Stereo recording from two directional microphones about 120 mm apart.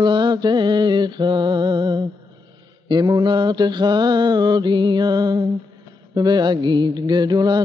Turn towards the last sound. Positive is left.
turn(degrees=-35)  # may be behind; listen again after turning